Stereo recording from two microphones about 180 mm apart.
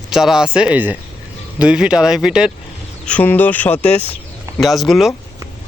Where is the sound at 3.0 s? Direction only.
10° left (ahead or behind).